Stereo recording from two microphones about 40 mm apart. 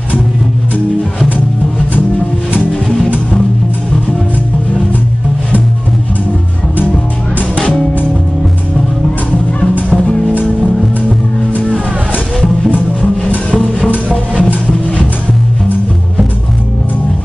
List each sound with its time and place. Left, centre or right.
7.5 s music: left
9.8 s music: left
14.1 s music: left